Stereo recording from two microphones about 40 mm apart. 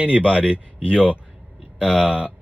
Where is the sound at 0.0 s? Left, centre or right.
Right.